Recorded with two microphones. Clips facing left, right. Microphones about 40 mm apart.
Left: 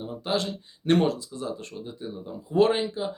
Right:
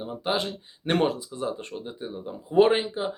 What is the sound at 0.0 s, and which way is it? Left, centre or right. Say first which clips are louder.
Speech: even; right.